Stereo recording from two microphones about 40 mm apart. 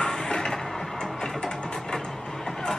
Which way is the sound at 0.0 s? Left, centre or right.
Centre.